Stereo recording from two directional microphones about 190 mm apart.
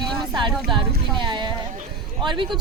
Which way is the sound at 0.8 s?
25° right (ahead or behind).